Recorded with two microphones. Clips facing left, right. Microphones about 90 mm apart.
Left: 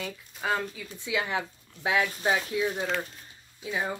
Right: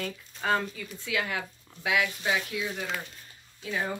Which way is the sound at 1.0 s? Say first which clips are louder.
Left 2 dB; 20° left (ahead or behind).